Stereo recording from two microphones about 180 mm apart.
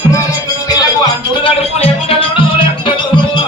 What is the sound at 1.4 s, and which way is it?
Music, 30° left (ahead or behind).